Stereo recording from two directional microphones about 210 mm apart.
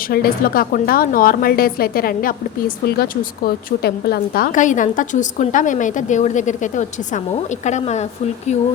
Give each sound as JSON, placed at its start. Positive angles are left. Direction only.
{"t": 0.1, "sound": "a woman's voice", "side_deg": 45}